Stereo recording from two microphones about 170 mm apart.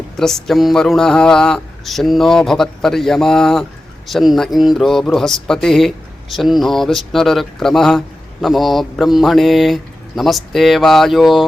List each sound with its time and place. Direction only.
0.2 s speech: 5° left (ahead or behind)